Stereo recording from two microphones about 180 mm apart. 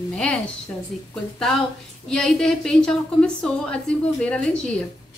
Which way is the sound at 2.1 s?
5° left (ahead or behind).